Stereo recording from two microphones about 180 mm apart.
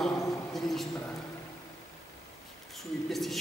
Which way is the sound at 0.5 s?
Centre (ahead or behind).